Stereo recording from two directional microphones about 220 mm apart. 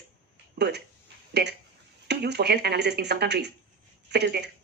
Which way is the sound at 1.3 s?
50° right (ahead or behind).